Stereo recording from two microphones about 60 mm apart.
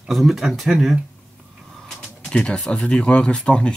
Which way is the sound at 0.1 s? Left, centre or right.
Centre.